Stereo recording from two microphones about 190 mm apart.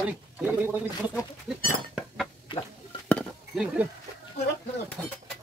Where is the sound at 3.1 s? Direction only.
Centre (ahead or behind).